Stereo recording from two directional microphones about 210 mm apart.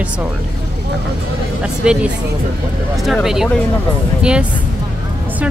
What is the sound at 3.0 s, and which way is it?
Speech, centre (ahead or behind).